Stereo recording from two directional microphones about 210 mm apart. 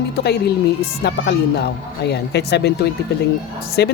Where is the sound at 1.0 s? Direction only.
50° left (ahead or behind).